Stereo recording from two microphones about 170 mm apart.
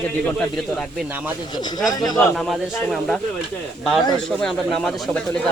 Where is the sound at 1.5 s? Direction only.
20° left (ahead or behind).